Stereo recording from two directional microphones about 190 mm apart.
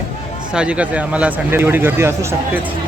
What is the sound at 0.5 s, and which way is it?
Speech, 5° right (ahead or behind).